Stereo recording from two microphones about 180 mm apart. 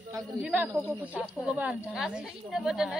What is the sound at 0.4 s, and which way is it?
A woman's voice, 5° right (ahead or behind).